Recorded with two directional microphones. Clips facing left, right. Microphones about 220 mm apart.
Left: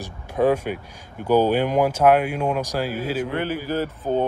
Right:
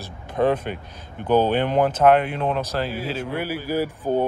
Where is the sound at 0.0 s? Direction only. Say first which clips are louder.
Left 1 dB; 10° left (ahead or behind).